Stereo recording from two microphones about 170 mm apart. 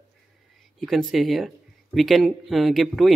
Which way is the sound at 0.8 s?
Centre (ahead or behind).